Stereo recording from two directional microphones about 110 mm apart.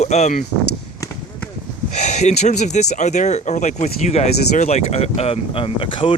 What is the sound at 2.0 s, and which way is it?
Speech, 90° left.